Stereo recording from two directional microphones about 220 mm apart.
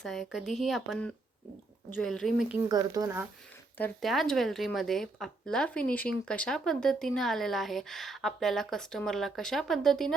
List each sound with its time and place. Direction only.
0.0 s speech: centre (ahead or behind)
2.6 s speech: 15° right (ahead or behind)
3.8 s speech: 5° left (ahead or behind)